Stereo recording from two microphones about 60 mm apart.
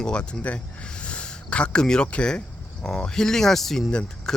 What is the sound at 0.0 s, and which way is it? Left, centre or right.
Speech, centre.